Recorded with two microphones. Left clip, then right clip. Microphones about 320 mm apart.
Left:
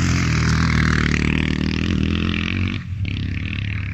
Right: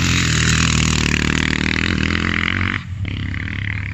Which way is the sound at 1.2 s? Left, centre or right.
Right.